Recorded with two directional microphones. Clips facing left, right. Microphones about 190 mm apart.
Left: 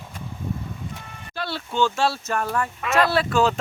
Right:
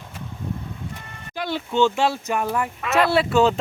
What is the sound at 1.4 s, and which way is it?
Speech, 15° right (ahead or behind).